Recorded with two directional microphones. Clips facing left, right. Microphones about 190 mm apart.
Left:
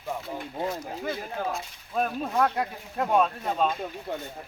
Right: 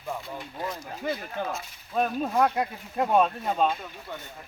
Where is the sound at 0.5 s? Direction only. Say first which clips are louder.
Left 4 dB; 25° left (ahead or behind).